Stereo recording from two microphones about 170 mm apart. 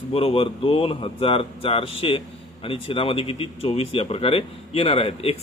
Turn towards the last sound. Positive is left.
turn(degrees=35)  # may be behind; listen again after turning